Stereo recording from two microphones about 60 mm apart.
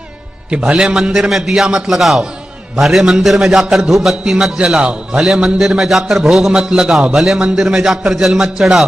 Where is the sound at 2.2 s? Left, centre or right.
Centre.